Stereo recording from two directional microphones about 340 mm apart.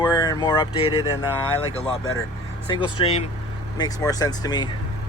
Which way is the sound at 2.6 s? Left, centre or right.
Centre.